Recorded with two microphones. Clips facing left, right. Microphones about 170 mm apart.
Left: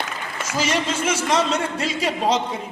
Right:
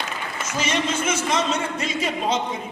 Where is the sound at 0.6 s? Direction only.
35° left (ahead or behind).